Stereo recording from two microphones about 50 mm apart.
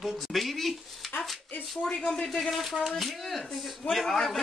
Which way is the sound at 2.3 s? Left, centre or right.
Centre.